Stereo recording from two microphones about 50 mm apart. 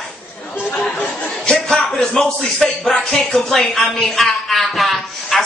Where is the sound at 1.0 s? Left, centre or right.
Left.